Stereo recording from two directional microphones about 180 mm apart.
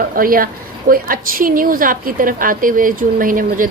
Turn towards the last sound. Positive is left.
turn(degrees=-50)  # may be behind; listen again after turning